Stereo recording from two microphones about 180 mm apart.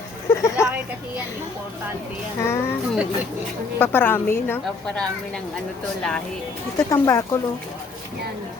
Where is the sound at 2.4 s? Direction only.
15° left (ahead or behind).